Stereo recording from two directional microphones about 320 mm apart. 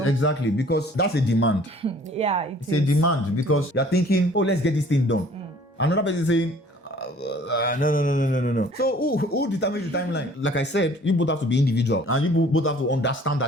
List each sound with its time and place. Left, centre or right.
0.0 s mantra: left
1.8 s speech: centre
2.6 s speech: left
3.8 s mantra: left